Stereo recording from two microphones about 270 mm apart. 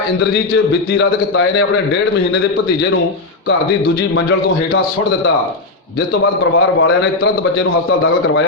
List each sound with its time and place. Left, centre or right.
0.2 s a man's voice: left
3.8 s a man's voice: left
6.4 s a man's voice: left